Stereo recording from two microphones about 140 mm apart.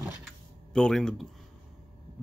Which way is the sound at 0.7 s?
5° left (ahead or behind).